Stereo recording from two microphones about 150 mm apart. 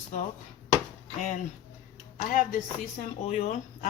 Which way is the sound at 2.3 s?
60° left (ahead or behind).